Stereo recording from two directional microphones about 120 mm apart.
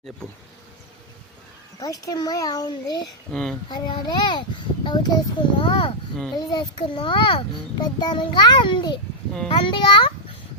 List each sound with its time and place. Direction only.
1.8 s a child's voice: 30° left (ahead or behind)
3.3 s speech: 5° left (ahead or behind)
3.7 s a child's voice: 40° left (ahead or behind)